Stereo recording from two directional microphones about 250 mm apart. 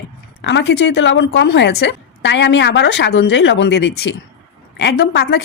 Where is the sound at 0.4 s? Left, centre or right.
Left.